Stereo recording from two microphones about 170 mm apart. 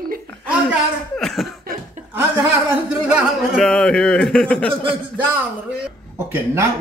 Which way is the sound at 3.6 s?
5° left (ahead or behind).